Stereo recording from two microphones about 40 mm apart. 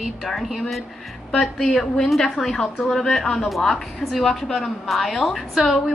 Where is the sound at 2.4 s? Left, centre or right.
Centre.